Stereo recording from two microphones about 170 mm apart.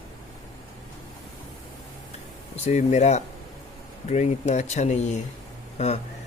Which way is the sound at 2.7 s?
40° left (ahead or behind).